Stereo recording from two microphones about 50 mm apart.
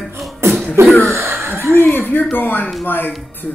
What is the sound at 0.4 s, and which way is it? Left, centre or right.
Cough, right.